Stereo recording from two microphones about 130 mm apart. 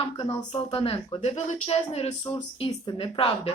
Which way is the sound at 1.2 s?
60° left (ahead or behind).